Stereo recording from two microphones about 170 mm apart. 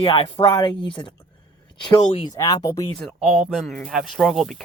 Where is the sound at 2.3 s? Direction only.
20° left (ahead or behind).